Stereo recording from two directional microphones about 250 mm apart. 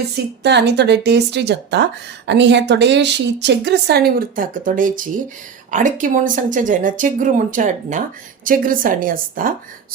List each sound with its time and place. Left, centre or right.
0.4 s a woman's voice: right